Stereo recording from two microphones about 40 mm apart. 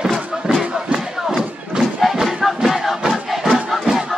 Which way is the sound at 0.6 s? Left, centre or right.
Right.